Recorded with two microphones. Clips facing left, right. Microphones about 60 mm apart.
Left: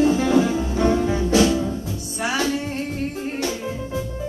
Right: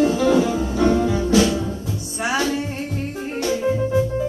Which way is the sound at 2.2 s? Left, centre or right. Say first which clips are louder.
Right 1 dB; right.